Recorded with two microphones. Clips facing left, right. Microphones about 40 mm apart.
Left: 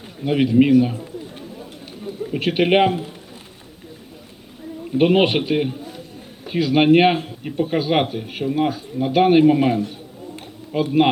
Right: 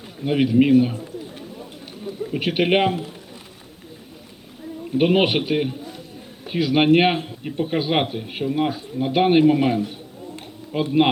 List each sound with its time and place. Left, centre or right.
0.3 s a man's voice: centre
2.4 s a man's voice: centre
4.9 s a man's voice: centre